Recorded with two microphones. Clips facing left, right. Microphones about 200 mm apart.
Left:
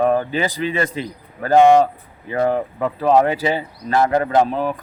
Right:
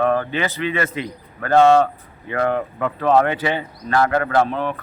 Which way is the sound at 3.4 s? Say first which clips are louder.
Left 2 dB; 35° left (ahead or behind).